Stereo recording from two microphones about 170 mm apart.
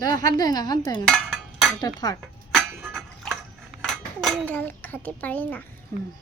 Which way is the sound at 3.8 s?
Centre (ahead or behind).